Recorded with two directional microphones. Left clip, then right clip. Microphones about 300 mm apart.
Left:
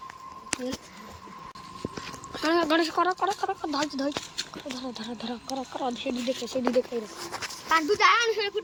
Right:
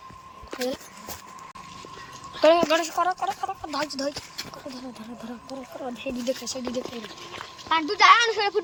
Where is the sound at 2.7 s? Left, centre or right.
Centre.